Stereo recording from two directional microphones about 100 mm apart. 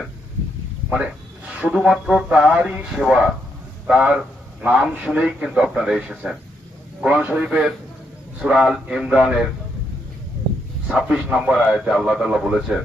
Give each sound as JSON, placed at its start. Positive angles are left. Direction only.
{"t": 0.9, "sound": "a man's voice", "side_deg": -10}
{"t": 10.8, "sound": "a man's voice", "side_deg": -5}